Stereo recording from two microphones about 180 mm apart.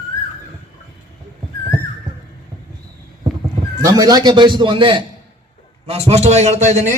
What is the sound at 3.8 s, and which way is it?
A man's voice, 20° right (ahead or behind).